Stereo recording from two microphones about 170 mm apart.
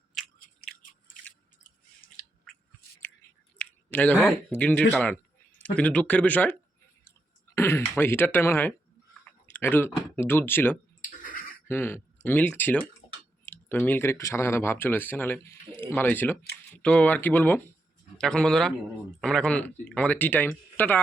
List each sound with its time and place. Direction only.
0.2 s biting: centre (ahead or behind)
0.8 s a sound: 55° left (ahead or behind)
3.6 s clicking: 10° left (ahead or behind)
4.5 s speech: 10° left (ahead or behind)
11.2 s a sound: 55° left (ahead or behind)
11.7 s speech: 10° left (ahead or behind)